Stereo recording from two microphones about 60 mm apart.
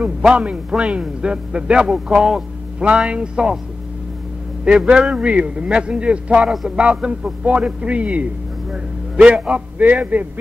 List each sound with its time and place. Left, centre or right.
0.3 s a man's voice: centre
4.6 s a man's voice: centre